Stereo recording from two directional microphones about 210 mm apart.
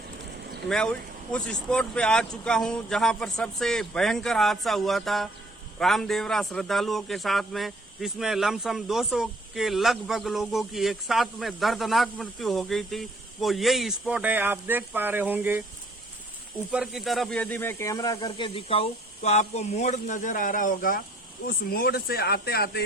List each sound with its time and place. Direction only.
0.7 s speech: 5° left (ahead or behind)
16.7 s speech: centre (ahead or behind); by 22.8 s 50° left (ahead or behind)